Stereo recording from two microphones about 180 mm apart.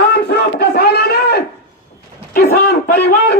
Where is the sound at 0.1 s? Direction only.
65° left (ahead or behind).